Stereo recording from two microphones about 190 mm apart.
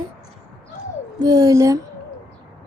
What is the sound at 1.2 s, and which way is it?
Child singing, 20° right (ahead or behind).